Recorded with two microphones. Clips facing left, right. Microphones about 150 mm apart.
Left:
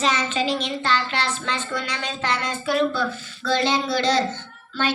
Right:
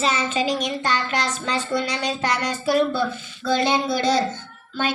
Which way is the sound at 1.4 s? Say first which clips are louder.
Right 4 dB; 35° right (ahead or behind).